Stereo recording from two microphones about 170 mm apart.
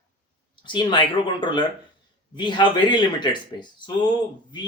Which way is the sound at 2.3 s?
25° left (ahead or behind).